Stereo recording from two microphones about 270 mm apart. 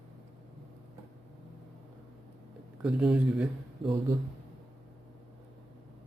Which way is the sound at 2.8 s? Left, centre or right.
Centre.